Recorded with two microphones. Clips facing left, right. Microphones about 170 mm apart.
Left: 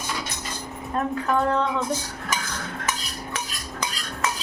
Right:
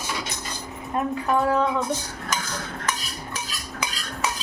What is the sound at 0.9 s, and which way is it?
Speech, 10° right (ahead or behind).